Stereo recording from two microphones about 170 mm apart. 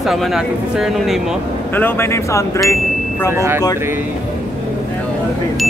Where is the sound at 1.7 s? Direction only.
15° left (ahead or behind).